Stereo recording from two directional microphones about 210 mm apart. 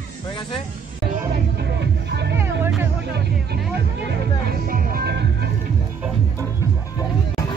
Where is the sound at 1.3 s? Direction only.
50° right (ahead or behind).